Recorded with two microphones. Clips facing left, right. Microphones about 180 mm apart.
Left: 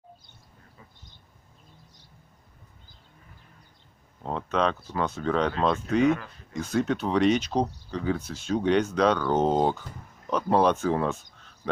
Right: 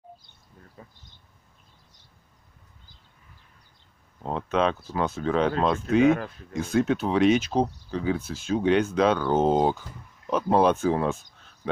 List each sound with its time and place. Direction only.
0.8 s a sound: 45° right (ahead or behind)
4.2 s speech: 5° right (ahead or behind)
6.0 s speech: 50° right (ahead or behind)
6.5 s speech: 5° right (ahead or behind)